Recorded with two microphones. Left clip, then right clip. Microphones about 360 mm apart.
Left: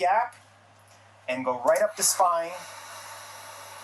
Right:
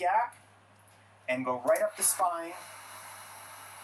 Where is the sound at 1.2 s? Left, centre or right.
Centre.